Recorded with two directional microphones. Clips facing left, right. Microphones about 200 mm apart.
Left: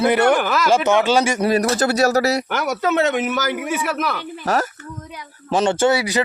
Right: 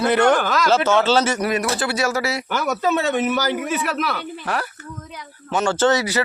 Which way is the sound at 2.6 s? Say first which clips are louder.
Even; 15° left (ahead or behind).